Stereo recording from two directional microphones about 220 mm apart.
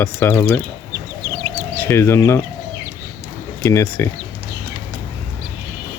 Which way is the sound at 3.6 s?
10° left (ahead or behind).